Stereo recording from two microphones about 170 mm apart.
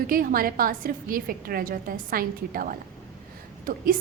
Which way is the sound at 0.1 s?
55° right (ahead or behind).